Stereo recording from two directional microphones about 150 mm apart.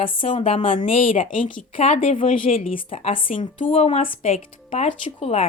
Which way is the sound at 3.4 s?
55° left (ahead or behind).